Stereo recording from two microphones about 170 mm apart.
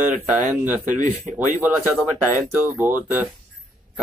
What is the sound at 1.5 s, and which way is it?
Speech, 10° right (ahead or behind).